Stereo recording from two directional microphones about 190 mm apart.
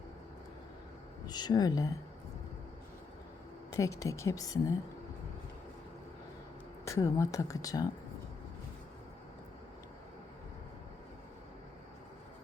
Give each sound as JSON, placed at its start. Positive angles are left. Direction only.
{"t": 1.3, "sound": "speech", "side_deg": 20}
{"t": 3.7, "sound": "speech", "side_deg": 15}
{"t": 6.8, "sound": "speech", "side_deg": 15}